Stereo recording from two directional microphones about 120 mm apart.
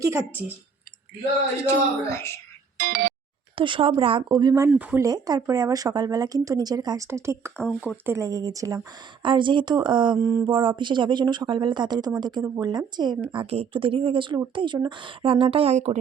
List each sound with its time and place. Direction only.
0.0 s speech: 25° right (ahead or behind)
1.6 s a woman's voice: 20° left (ahead or behind)
3.5 s speech: 45° right (ahead or behind)
4.7 s speech: 10° right (ahead or behind)
4.9 s speech: 30° right (ahead or behind)
7.5 s speech: 5° left (ahead or behind)
8.0 s speech: 25° right (ahead or behind)
9.2 s speech: 40° right (ahead or behind)
10.2 s speech: 30° right (ahead or behind)
10.5 s speech: 40° right (ahead or behind)
13.3 s speech: 50° right (ahead or behind); by 16.0 s 65° right (ahead or behind)